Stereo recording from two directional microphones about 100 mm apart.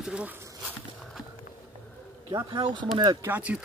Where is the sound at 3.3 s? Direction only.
15° right (ahead or behind).